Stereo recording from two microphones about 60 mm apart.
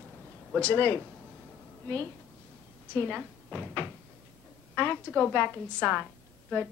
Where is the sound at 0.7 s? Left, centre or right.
Left.